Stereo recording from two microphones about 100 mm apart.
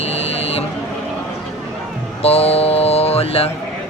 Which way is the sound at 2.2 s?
90° left.